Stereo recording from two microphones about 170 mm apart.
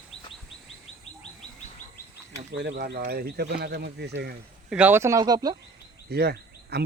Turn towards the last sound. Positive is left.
turn(degrees=-70)  # may be behind; listen again after turning